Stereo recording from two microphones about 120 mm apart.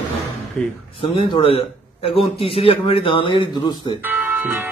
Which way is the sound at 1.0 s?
45° left (ahead or behind).